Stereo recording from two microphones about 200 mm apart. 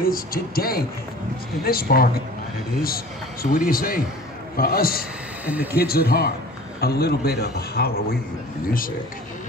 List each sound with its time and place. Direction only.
0.0 s a man's voice: 45° left (ahead or behind)
3.5 s a man's voice: 45° left (ahead or behind)
5.4 s speech: 10° right (ahead or behind)
5.8 s a man's voice: 50° left (ahead or behind)